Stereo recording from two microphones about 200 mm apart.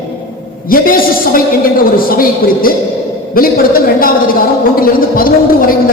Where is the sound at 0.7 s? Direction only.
45° left (ahead or behind).